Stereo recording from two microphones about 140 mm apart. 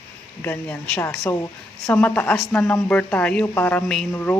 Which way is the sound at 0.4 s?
10° left (ahead or behind).